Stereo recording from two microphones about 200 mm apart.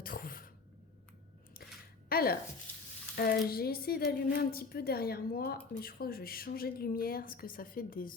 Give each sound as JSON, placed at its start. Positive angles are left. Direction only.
{"t": 0.0, "sound": "cough", "side_deg": 45}
{"t": 2.0, "sound": "a sound", "side_deg": 50}
{"t": 2.7, "sound": "stir", "side_deg": 10}
{"t": 3.2, "sound": "a woman's voice", "side_deg": 50}